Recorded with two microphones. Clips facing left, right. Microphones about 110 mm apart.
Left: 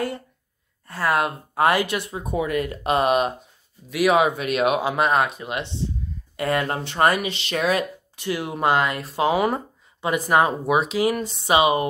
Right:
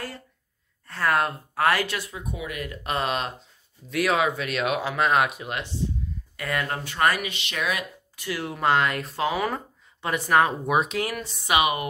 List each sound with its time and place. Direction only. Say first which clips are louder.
0.8 s speech: left 2 dB; 10° left (ahead or behind)
1.5 s speech: left 4 dB; 20° left (ahead or behind)
2.3 s speech: left 12 dB; 45° left (ahead or behind)
2.6 s speech: left 3 dB; 25° left (ahead or behind)
5.1 s speech: left 1 dB; 5° right (ahead or behind)
6.3 s speech: left 6 dB; 25° left (ahead or behind)
8.4 s speech: left 2 dB; 15° left (ahead or behind)
8.7 s speech: left 1 dB; centre (ahead or behind)
9.1 s speech: left 5 dB; 20° left (ahead or behind)
10.7 s speech: left 3 dB; 5° left (ahead or behind)
11.2 s speech: left 1 dB; 25° left (ahead or behind)